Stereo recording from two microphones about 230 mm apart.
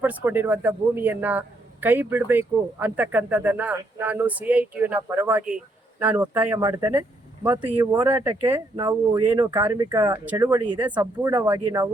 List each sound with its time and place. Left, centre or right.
0.0 s a man's voice: centre
11.0 s a man's voice: centre